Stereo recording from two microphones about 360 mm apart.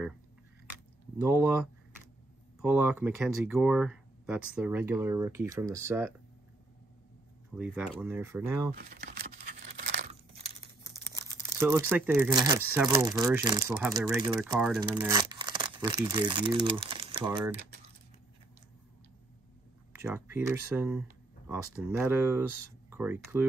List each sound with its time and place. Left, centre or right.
1.1 s speech: centre
7.5 s speech: centre
8.7 s crumpling: right
11.6 s speech: centre
20.0 s speech: centre